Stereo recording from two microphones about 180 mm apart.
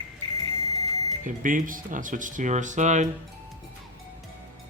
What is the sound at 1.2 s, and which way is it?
Speech, 50° right (ahead or behind).